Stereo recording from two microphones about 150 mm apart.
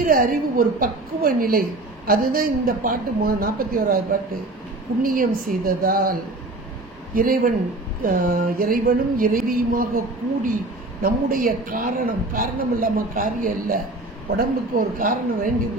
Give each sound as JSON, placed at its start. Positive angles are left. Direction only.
{"t": 0.0, "sound": "a woman's voice", "side_deg": -70}
{"t": 7.2, "sound": "a woman's voice", "side_deg": -70}